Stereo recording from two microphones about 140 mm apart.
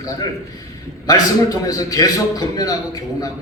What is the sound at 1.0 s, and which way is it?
A man's voice, 25° left (ahead or behind).